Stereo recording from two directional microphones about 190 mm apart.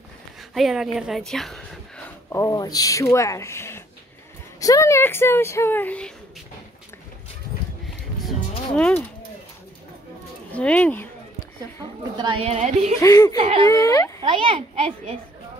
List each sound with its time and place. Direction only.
0.6 s a woman's voice: centre (ahead or behind)
2.2 s speech: 15° left (ahead or behind)
8.7 s speech: 5° left (ahead or behind)
10.5 s speech: 5° left (ahead or behind)
12.2 s speech: 25° right (ahead or behind)
13.0 s a child's voice: 20° left (ahead or behind)
13.4 s a child's voice: 30° right (ahead or behind)
13.7 s speech: 20° left (ahead or behind)
14.2 s a child's voice: 25° right (ahead or behind)